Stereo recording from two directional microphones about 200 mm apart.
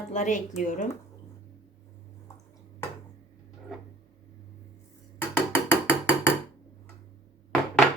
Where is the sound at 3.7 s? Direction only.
5° left (ahead or behind).